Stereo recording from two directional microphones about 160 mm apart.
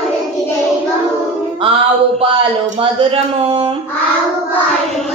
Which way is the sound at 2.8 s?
35° right (ahead or behind).